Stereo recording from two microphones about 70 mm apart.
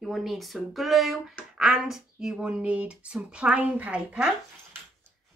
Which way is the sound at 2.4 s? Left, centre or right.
Centre.